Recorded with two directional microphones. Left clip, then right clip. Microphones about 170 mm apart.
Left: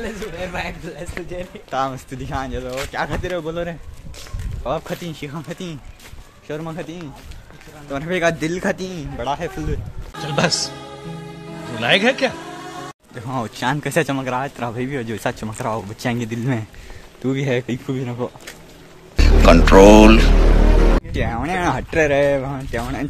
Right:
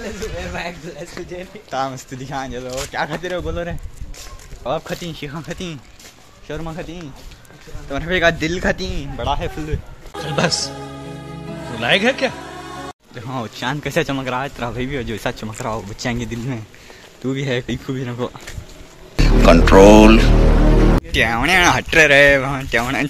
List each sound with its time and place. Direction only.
0.0 s speech: 55° left (ahead or behind)
1.7 s speech: 5° left (ahead or behind); by 5.8 s 10° right (ahead or behind)
6.4 s speech: centre (ahead or behind)
11.7 s speech: centre (ahead or behind)
19.1 s speech: centre (ahead or behind)